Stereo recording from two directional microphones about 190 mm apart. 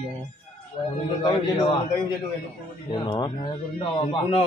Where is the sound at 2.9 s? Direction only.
20° left (ahead or behind).